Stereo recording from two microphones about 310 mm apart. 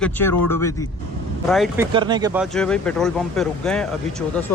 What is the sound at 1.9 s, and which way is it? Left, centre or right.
Speech, centre.